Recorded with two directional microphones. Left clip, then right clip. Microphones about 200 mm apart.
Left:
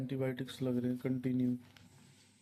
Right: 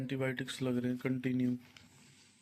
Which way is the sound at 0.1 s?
5° left (ahead or behind).